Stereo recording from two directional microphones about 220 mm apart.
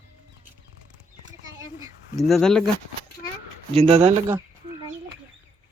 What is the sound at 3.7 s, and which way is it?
Speech, 25° right (ahead or behind).